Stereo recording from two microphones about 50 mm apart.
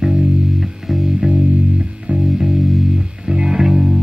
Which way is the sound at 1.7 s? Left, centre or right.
Right.